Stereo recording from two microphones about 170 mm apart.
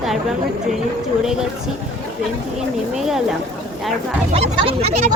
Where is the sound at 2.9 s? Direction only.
Centre (ahead or behind).